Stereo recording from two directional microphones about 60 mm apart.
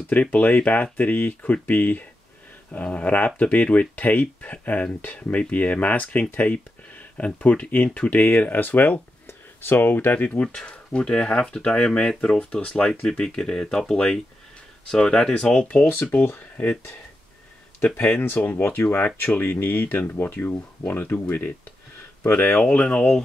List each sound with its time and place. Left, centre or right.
0.1 s speech: left
15.9 s speech: left
18.2 s speech: left
22.6 s speech: left